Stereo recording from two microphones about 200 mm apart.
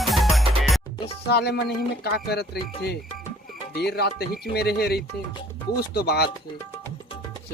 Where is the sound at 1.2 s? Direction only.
55° left (ahead or behind).